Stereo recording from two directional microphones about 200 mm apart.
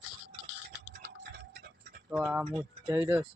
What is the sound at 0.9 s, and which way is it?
Tick-tock, 55° right (ahead or behind).